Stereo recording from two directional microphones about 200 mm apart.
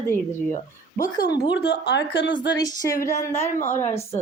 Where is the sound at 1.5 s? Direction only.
60° left (ahead or behind).